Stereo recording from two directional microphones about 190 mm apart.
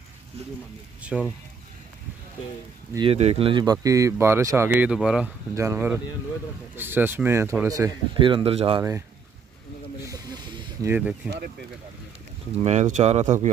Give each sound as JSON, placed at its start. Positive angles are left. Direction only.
{"t": 1.1, "sound": "speech", "side_deg": 0}
{"t": 3.1, "sound": "speech", "side_deg": -35}
{"t": 5.5, "sound": "speech", "side_deg": -15}
{"t": 10.8, "sound": "speech", "side_deg": -10}
{"t": 12.5, "sound": "speech", "side_deg": -35}